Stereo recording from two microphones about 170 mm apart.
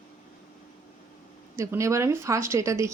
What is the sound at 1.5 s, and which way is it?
Speech, 15° right (ahead or behind).